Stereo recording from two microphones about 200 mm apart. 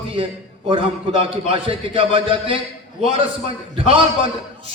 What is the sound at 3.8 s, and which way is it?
Speech, 25° right (ahead or behind).